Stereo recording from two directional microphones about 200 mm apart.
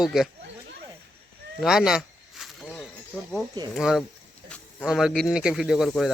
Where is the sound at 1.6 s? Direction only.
Centre (ahead or behind).